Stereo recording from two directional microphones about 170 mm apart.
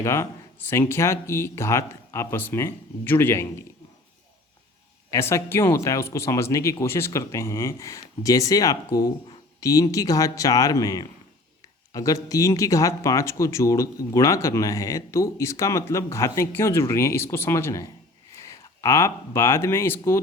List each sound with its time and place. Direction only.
0.0 s speech: 15° left (ahead or behind)
5.1 s speech: 15° left (ahead or behind)